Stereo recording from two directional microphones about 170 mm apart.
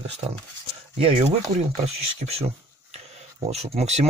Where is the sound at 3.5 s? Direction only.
40° right (ahead or behind).